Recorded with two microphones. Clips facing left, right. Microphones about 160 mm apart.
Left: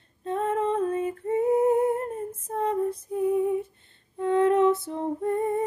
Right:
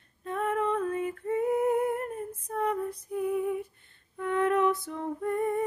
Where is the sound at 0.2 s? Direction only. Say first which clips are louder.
Left 3 dB; 25° left (ahead or behind).